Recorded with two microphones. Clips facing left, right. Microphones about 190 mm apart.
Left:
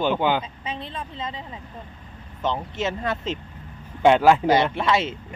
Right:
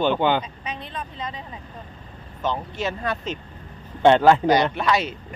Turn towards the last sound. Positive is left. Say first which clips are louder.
# even
turn(degrees=25)  # may be behind; listen again after turning